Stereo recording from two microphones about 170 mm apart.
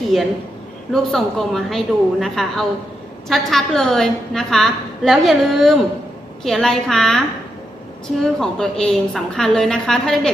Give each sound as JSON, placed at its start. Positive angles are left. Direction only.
{"t": 0.9, "sound": "a woman's voice", "side_deg": 0}
{"t": 8.2, "sound": "a woman's voice", "side_deg": 5}